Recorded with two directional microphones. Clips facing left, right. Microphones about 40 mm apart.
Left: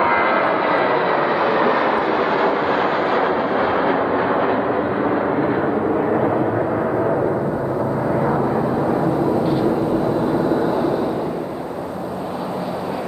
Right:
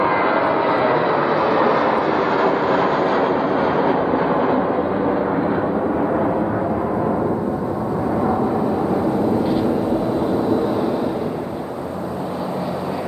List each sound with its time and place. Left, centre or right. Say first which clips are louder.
0.0 s vehicle: left 1 dB; centre